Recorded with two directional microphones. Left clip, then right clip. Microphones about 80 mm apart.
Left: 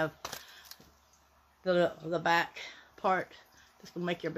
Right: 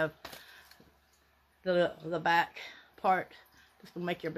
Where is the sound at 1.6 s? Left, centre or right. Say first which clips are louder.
Left 1 dB; centre.